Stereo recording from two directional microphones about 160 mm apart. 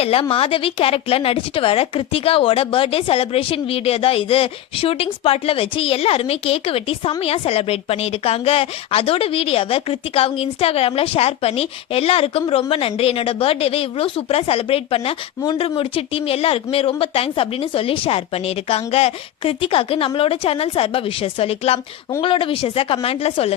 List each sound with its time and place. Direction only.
0.0 s speech: 35° left (ahead or behind)